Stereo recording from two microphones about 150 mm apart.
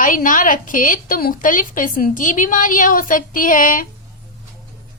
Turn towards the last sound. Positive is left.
turn(degrees=65)  # may be behind; listen again after turning